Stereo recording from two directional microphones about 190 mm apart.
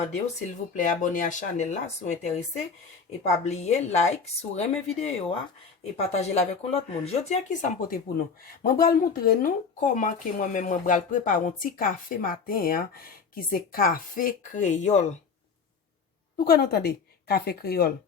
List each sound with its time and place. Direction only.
0.7 s speech: 45° left (ahead or behind)
3.4 s speech: 35° left (ahead or behind)
16.4 s speech: 55° left (ahead or behind)